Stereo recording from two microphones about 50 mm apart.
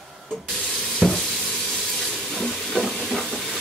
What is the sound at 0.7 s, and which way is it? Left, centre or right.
Water tap, centre.